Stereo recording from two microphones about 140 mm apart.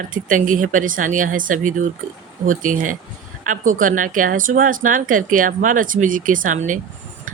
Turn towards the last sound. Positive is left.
turn(degrees=-65)  # may be behind; listen again after turning